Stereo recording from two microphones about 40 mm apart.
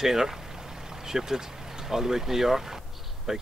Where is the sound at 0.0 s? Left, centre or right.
Centre.